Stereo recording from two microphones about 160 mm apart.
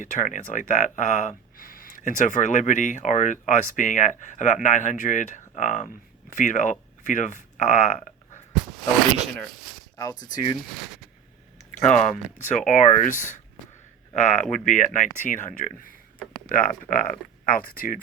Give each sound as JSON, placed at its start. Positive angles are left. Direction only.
{"t": 0.0, "sound": "speech", "side_deg": 55}
{"t": 8.7, "sound": "speech", "side_deg": 0}
{"t": 10.0, "sound": "speech", "side_deg": 25}
{"t": 11.8, "sound": "speech", "side_deg": 50}